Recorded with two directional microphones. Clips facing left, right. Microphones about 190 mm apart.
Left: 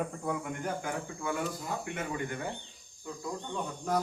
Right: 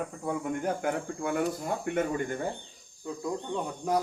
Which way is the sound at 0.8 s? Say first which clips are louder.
Right 5 dB; 60° right (ahead or behind).